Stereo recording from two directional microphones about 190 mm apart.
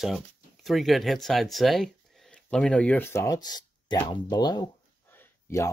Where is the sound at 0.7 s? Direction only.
Centre (ahead or behind).